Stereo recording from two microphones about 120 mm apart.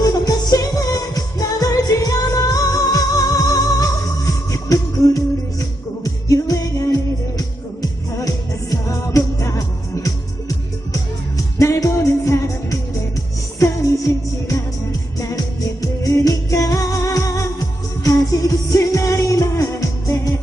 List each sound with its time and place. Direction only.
0.0 s music of asia: 30° left (ahead or behind)
4.3 s music: 30° left (ahead or behind)
11.3 s music: 25° left (ahead or behind)
14.1 s music: 25° left (ahead or behind)
15.8 s music: 30° left (ahead or behind)